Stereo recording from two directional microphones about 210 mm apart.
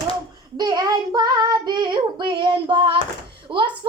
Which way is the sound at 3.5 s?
25° right (ahead or behind).